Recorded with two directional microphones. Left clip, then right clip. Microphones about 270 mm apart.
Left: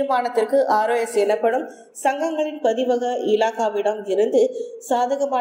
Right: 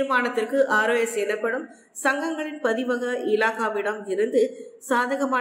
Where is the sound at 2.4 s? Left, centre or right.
Right.